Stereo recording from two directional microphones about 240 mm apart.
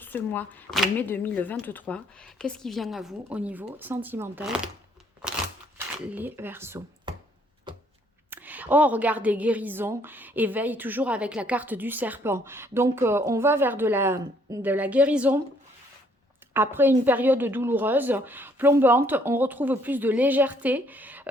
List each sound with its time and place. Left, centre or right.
0.0 s speech: centre
5.7 s speech: centre
7.7 s a sound: centre
8.3 s a woman's voice: centre
16.6 s a woman's voice: centre